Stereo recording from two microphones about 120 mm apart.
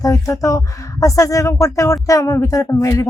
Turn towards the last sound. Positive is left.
turn(degrees=30)  # may be behind; listen again after turning